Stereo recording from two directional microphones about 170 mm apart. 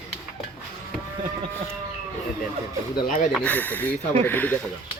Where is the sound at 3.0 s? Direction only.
50° left (ahead or behind).